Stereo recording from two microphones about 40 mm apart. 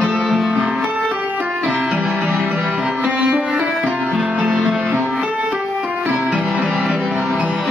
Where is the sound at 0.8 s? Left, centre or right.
Right.